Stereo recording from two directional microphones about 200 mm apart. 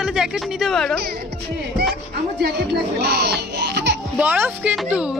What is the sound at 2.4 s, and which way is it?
Speech, 55° right (ahead or behind).